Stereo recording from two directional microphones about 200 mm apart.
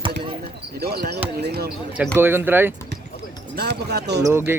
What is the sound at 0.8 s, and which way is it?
Speech, 50° right (ahead or behind).